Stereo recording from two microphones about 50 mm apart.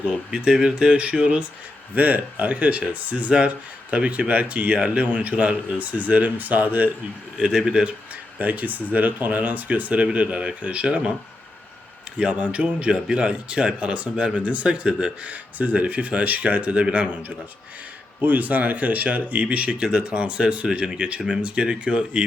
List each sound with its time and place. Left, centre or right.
0.3 s speech: centre
2.0 s speech: right
7.3 s a man's voice: centre
8.4 s speech: right
12.1 s speech: right
15.3 s speech: right